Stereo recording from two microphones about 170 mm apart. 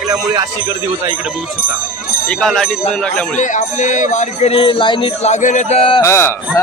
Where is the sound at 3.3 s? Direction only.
45° left (ahead or behind).